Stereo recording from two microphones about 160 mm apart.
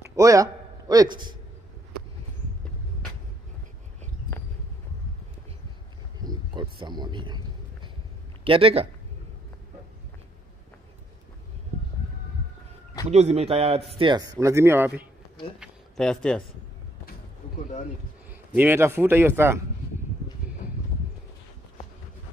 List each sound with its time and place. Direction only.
0.1 s a man's voice: 20° right (ahead or behind)
6.2 s a sound: 30° right (ahead or behind)
8.5 s speech: 35° right (ahead or behind)
13.1 s speech: 45° right (ahead or behind); by 15.0 s 15° right (ahead or behind)
15.6 s a sound: 5° left (ahead or behind)
18.5 s speech: 10° right (ahead or behind)